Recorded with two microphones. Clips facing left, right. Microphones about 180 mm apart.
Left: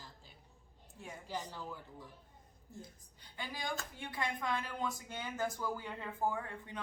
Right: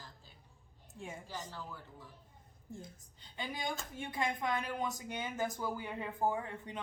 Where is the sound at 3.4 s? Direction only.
20° right (ahead or behind).